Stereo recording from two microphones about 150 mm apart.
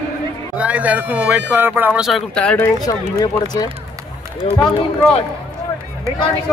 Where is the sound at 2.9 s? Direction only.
25° left (ahead or behind).